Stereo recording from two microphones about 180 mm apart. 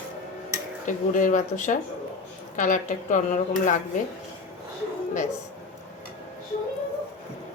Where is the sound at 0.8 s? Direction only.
45° left (ahead or behind).